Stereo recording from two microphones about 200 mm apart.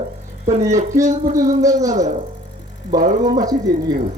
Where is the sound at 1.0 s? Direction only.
35° right (ahead or behind).